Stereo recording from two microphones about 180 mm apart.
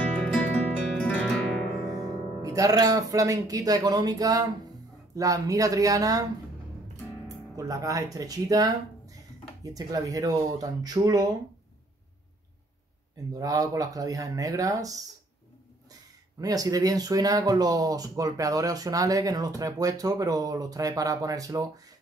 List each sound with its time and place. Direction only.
0.0 s music: 5° left (ahead or behind)
2.0 s speech: 20° right (ahead or behind)
7.2 s speech: 20° right (ahead or behind)
13.3 s speech: 20° right (ahead or behind)